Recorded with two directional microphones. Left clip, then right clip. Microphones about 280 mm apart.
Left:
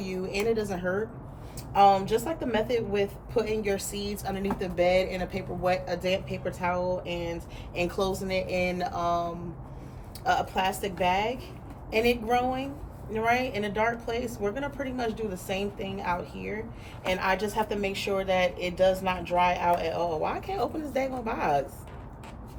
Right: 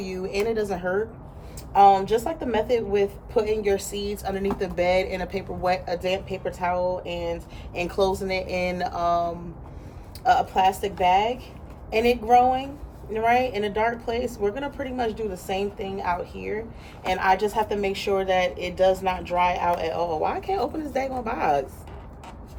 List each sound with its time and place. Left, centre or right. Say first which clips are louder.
0.0 s a woman's voice: right 3 dB; centre